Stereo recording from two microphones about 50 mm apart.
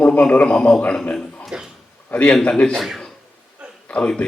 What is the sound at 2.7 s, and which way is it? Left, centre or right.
Speech, centre.